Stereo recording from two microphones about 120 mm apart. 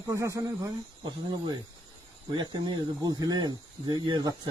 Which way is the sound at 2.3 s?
35° right (ahead or behind).